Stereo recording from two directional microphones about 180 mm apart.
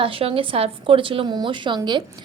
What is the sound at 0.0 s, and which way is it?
A woman's voice, 30° right (ahead or behind).